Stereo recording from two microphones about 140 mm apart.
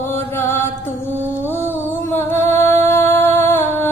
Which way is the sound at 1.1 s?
15° right (ahead or behind).